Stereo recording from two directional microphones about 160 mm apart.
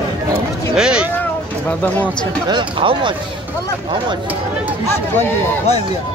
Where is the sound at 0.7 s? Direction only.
5° right (ahead or behind).